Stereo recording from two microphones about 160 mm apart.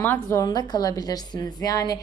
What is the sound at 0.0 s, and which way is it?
A woman's voice, 15° left (ahead or behind).